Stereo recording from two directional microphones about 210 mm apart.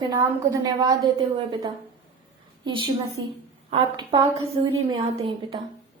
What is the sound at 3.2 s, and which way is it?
Speech, 65° right (ahead or behind).